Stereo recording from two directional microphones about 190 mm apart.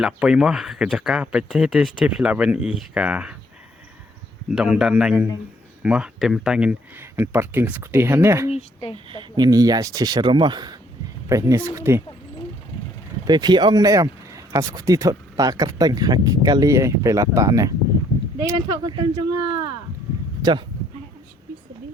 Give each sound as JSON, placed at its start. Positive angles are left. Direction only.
{"t": 0.0, "sound": "speech", "side_deg": -5}
{"t": 4.5, "sound": "speech", "side_deg": -5}
{"t": 8.4, "sound": "speech", "side_deg": 30}
{"t": 9.0, "sound": "speech", "side_deg": -25}
{"t": 13.2, "sound": "speech", "side_deg": -20}
{"t": 20.4, "sound": "speech", "side_deg": -25}